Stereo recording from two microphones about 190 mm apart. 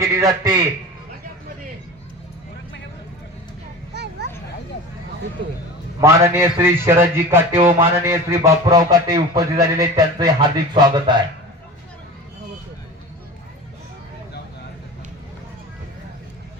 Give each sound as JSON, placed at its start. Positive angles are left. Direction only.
{"t": 0.0, "sound": "speech", "side_deg": -15}
{"t": 3.9, "sound": "a sound", "side_deg": -60}
{"t": 6.0, "sound": "speech", "side_deg": -15}